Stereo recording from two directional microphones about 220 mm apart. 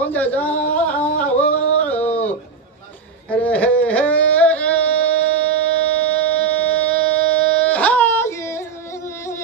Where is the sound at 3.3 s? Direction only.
5° left (ahead or behind).